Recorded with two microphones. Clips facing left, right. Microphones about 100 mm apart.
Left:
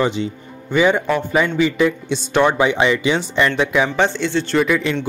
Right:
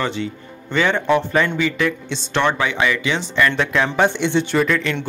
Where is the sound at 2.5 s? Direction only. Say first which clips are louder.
Left 4 dB; 20° left (ahead or behind).